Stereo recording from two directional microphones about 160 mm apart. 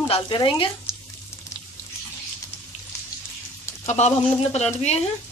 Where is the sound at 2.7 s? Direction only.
45° left (ahead or behind).